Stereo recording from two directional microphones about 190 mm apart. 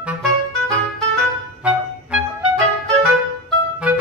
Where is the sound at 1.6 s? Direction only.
5° right (ahead or behind).